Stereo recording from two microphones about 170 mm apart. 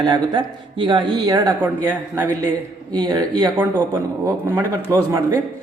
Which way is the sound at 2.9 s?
25° right (ahead or behind).